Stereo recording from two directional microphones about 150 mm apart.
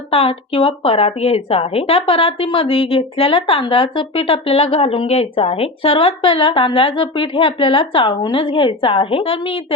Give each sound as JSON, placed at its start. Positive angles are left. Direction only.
{"t": 0.1, "sound": "a woman's voice", "side_deg": 40}